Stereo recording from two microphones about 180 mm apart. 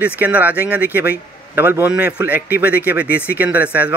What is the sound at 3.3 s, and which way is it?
Speech, 10° right (ahead or behind).